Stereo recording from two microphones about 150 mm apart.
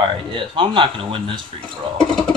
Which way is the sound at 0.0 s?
35° right (ahead or behind).